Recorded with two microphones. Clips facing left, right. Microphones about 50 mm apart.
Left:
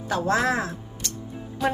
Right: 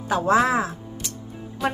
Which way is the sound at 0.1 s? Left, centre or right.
Centre.